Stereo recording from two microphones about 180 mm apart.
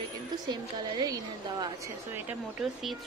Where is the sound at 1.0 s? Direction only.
20° right (ahead or behind).